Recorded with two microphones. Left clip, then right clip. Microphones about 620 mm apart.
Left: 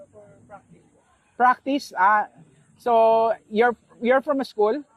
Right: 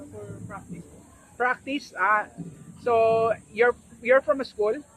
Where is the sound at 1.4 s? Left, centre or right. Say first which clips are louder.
Left 7 dB; left.